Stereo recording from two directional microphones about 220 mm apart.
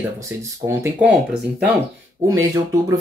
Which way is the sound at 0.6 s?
10° right (ahead or behind).